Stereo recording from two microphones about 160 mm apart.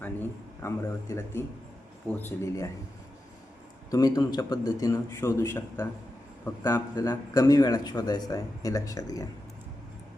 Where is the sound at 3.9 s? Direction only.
20° left (ahead or behind).